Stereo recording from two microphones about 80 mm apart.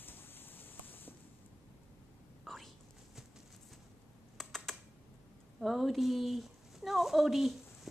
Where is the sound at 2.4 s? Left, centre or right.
Centre.